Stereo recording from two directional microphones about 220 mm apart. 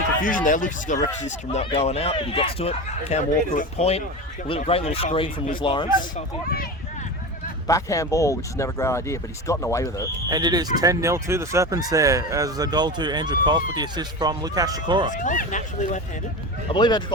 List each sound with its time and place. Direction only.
0.2 s speech: 40° left (ahead or behind); by 5.9 s 20° left (ahead or behind)
7.7 s speech: 15° left (ahead or behind)
10.2 s speech: 20° right (ahead or behind)
15.1 s speech: 35° left (ahead or behind)
16.7 s speech: 20° left (ahead or behind)